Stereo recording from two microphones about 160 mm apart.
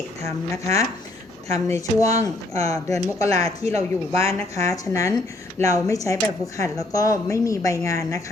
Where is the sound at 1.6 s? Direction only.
20° left (ahead or behind).